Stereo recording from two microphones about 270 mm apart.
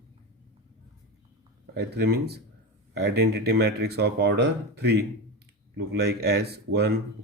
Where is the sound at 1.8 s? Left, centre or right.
Right.